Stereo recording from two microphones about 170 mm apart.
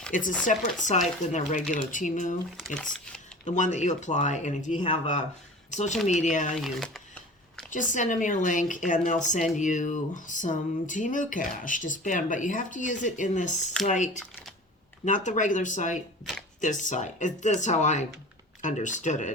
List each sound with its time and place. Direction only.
0.1 s speech: 50° left (ahead or behind)
2.6 s speech: 5° left (ahead or behind)
3.4 s speech: 45° left (ahead or behind)
5.7 s speech: 45° left (ahead or behind)
6.7 s speech: centre (ahead or behind)
7.7 s speech: 50° left (ahead or behind)